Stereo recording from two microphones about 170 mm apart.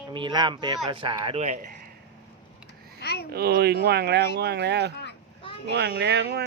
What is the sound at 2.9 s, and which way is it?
Babbling, 75° left (ahead or behind).